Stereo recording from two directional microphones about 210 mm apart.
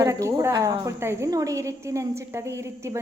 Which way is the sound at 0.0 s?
15° right (ahead or behind).